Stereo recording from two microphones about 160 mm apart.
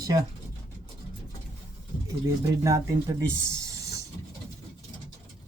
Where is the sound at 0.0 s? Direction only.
25° right (ahead or behind).